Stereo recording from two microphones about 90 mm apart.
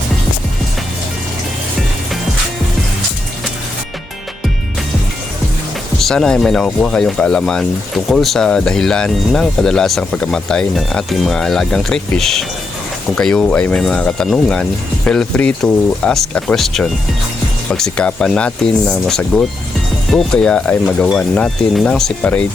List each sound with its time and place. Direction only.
6.0 s speech: 5° left (ahead or behind)
22.2 s speech: 15° left (ahead or behind)